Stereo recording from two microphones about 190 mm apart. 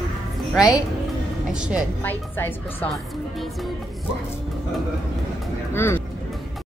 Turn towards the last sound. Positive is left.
turn(degrees=10)  # may be behind; listen again after turning